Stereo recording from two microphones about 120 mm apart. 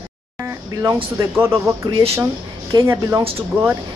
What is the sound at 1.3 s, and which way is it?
Speech, 20° right (ahead or behind).